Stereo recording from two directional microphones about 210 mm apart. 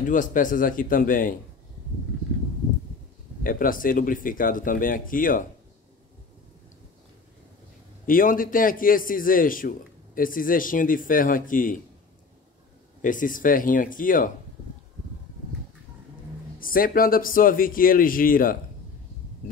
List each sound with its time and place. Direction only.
0.1 s a man's voice: 40° left (ahead or behind)
3.4 s a man's voice: 40° left (ahead or behind)
8.1 s a man's voice: 40° left (ahead or behind)
13.0 s a man's voice: 40° left (ahead or behind)
16.5 s a man's voice: 40° left (ahead or behind)